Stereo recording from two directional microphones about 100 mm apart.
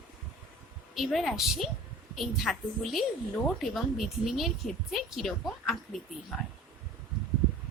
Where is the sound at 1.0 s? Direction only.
Centre (ahead or behind).